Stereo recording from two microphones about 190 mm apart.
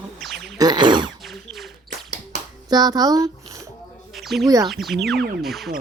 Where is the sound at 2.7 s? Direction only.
20° right (ahead or behind).